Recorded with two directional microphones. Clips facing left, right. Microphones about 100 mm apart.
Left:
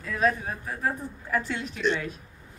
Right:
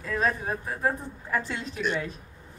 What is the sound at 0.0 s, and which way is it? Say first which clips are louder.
Speech: left 1 dB; 35° right (ahead or behind).